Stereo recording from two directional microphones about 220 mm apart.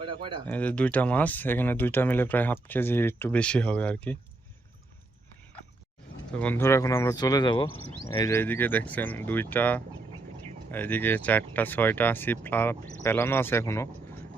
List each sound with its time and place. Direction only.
0.0 s speech: 25° right (ahead or behind)
0.4 s speech: 5° left (ahead or behind)
6.3 s speech: 5° left (ahead or behind)